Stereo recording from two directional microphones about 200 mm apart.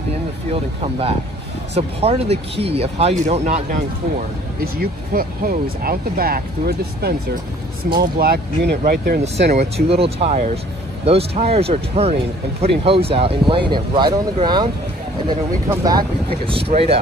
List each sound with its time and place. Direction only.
0.5 s speech: 30° right (ahead or behind)
4.6 s speech: 45° right (ahead or behind)
9.8 s speech: 30° right (ahead or behind)
15.7 s speech: 20° right (ahead or behind)